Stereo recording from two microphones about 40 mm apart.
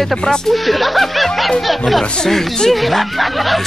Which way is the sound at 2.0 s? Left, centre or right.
Left.